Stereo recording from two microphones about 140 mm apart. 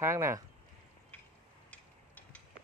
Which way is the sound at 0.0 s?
20° right (ahead or behind).